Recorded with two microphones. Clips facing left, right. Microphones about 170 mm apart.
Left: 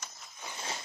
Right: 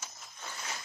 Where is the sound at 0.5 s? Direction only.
30° left (ahead or behind).